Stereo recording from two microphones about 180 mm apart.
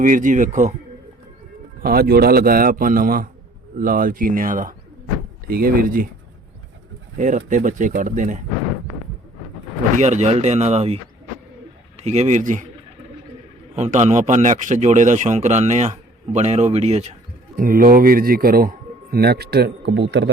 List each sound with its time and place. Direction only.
0.0 s speech: 45° right (ahead or behind)
1.8 s speech: 55° right (ahead or behind)
7.2 s speech: 45° right (ahead or behind)
10.0 s a man's voice: 40° right (ahead or behind)
13.7 s a man's voice: 40° right (ahead or behind)
17.6 s speech: 55° right (ahead or behind); by 20.3 s 75° right (ahead or behind)